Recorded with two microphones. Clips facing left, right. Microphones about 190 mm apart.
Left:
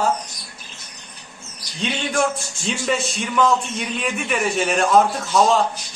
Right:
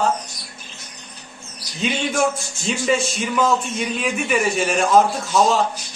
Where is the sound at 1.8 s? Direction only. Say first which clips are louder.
Right 1 dB; 5° right (ahead or behind).